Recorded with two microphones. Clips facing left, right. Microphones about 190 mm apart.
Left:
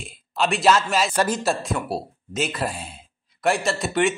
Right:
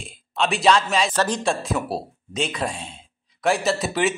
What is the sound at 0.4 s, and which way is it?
A man's voice, centre (ahead or behind).